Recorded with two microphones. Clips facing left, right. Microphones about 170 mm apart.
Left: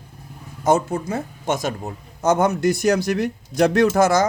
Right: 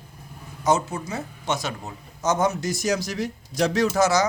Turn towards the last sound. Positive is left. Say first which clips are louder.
# left 4 dB
turn(degrees=50)  # may be behind; listen again after turning